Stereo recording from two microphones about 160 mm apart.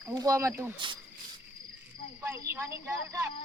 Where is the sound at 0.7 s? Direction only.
30° right (ahead or behind).